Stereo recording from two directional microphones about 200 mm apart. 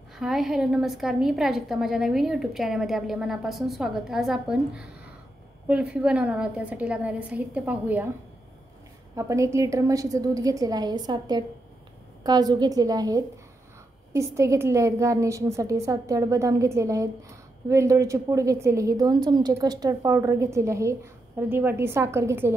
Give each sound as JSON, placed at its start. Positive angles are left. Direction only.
{"t": 0.2, "sound": "a woman's voice", "side_deg": 0}
{"t": 9.1, "sound": "a woman's voice", "side_deg": -15}